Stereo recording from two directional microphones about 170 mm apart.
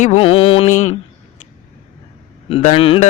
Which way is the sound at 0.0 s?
35° left (ahead or behind).